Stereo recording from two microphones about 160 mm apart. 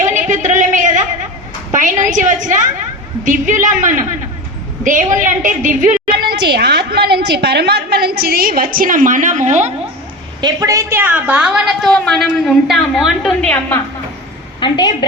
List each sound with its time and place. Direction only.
0.1 s a sound: 50° right (ahead or behind)
3.2 s a woman's voice: 55° right (ahead or behind)
10.4 s a woman's voice: 20° right (ahead or behind); by 13.5 s centre (ahead or behind)
13.5 s a woman's voice: 15° left (ahead or behind)
14.6 s a woman's voice: 25° left (ahead or behind)